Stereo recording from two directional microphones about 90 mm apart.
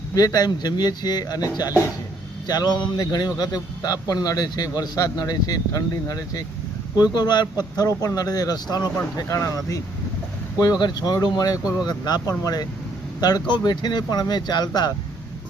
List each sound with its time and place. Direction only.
0.1 s speech: 40° left (ahead or behind)
3.8 s speech: 40° left (ahead or behind)
10.6 s speech: 50° left (ahead or behind)